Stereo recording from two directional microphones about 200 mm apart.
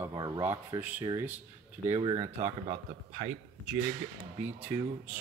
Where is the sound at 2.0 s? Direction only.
30° right (ahead or behind).